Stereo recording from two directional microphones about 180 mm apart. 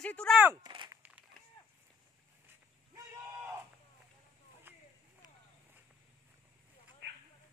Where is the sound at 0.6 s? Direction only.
25° right (ahead or behind).